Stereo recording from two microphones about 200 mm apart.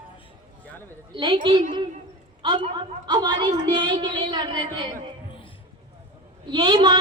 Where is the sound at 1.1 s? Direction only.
25° right (ahead or behind).